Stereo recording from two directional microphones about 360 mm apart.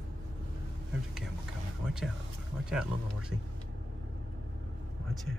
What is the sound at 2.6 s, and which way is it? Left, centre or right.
Speech, centre.